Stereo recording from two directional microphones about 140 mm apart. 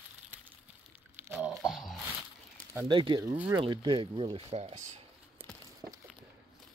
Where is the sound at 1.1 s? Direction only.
15° right (ahead or behind).